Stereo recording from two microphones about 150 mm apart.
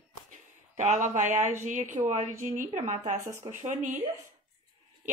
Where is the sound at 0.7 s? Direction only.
55° right (ahead or behind).